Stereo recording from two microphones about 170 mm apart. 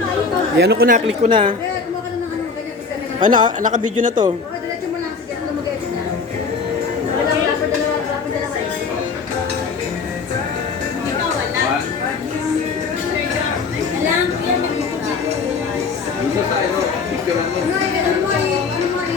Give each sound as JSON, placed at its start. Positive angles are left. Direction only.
{"t": 0.6, "sound": "speech", "side_deg": -70}
{"t": 1.3, "sound": "a woman's voice", "side_deg": -30}
{"t": 3.2, "sound": "speech", "side_deg": -50}